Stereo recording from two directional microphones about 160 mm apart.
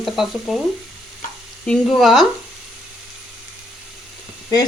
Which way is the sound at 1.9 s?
Centre (ahead or behind).